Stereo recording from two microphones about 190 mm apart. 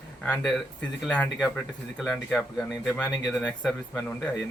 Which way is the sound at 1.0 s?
5° left (ahead or behind).